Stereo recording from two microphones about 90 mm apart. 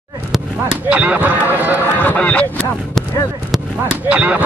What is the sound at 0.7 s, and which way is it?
Speech, 15° right (ahead or behind).